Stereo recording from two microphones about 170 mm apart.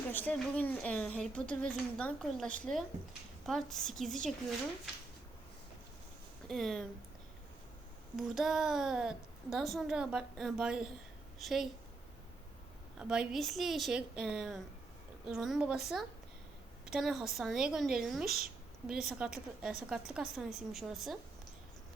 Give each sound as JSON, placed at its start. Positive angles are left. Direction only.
{"t": 0.1, "sound": "a woman's voice", "side_deg": 10}
{"t": 6.5, "sound": "a woman's voice", "side_deg": 0}
{"t": 8.1, "sound": "a woman's voice", "side_deg": 0}
{"t": 13.0, "sound": "a woman's voice", "side_deg": -5}
{"t": 16.8, "sound": "a woman's voice", "side_deg": 0}